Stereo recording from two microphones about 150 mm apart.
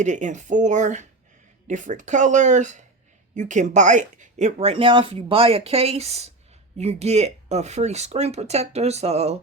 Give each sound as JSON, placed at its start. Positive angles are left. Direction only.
{"t": 0.0, "sound": "speech", "side_deg": -55}